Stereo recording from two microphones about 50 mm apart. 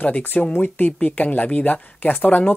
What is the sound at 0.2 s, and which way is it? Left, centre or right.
Speech, left.